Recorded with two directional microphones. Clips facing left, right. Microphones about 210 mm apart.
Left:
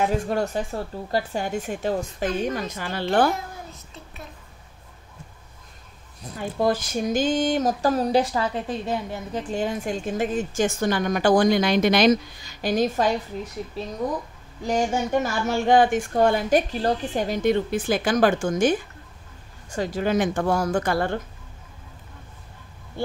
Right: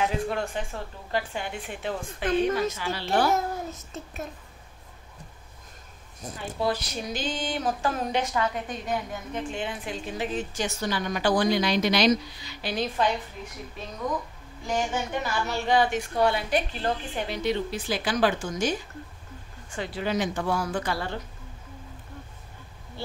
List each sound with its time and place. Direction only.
0.0 s speech: 40° left (ahead or behind)
3.3 s child singing: 45° right (ahead or behind)
6.3 s speech: 45° left (ahead or behind)
14.6 s speech: 40° left (ahead or behind)
19.7 s speech: 40° left (ahead or behind)
23.0 s speech: 50° left (ahead or behind)